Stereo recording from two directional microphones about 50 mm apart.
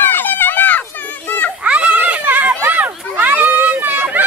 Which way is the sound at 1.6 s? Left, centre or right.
Right.